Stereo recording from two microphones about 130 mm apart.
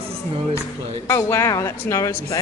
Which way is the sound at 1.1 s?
20° left (ahead or behind).